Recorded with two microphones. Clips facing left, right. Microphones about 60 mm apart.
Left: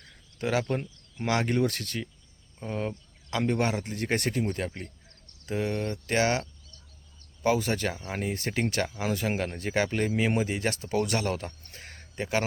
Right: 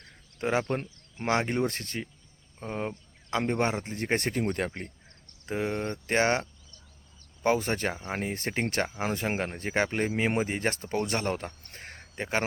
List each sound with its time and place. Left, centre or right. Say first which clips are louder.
0.0 s speech: right 1 dB; right
4.4 s speech: right 1 dB; right
5.5 s speech: left 1 dB; right
7.4 s speech: even; right